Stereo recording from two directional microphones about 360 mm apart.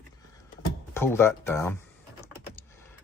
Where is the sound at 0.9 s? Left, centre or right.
Centre.